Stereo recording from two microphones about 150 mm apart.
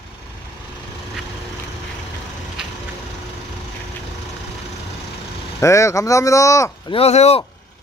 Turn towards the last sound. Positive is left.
turn(degrees=45)  # may be behind; listen again after turning